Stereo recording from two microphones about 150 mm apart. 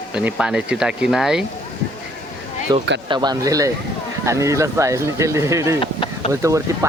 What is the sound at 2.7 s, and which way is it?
Speech, 30° right (ahead or behind).